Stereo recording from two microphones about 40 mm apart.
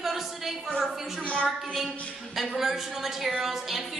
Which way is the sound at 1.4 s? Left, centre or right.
Centre.